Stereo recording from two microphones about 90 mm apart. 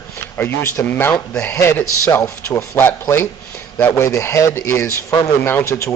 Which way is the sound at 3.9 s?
35° left (ahead or behind).